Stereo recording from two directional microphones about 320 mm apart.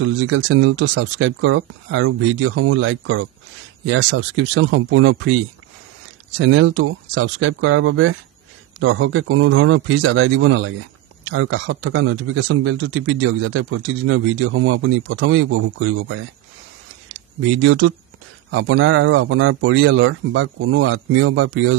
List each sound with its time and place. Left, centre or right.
0.0 s speech: right
6.3 s speech: right
17.6 s speech: right